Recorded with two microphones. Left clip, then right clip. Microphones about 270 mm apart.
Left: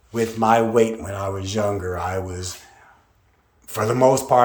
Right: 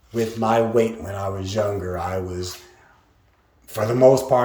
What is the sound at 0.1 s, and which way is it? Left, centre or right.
Speech, centre.